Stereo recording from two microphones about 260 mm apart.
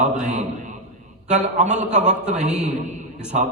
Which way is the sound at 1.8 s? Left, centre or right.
Right.